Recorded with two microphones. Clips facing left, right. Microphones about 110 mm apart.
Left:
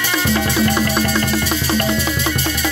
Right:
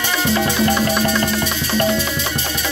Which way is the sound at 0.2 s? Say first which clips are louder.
Even; 10° right (ahead or behind).